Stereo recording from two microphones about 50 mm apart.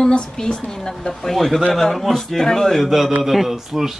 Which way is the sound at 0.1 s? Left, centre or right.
Centre.